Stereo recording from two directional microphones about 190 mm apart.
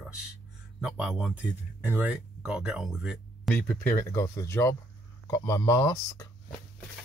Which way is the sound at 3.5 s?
10° left (ahead or behind).